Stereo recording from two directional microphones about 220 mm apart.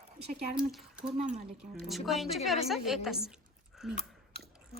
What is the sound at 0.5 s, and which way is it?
Speech, 5° right (ahead or behind).